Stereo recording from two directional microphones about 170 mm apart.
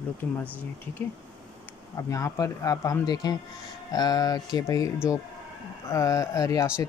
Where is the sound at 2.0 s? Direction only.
20° left (ahead or behind).